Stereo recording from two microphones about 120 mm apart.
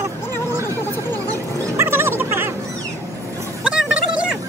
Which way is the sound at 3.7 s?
10° right (ahead or behind).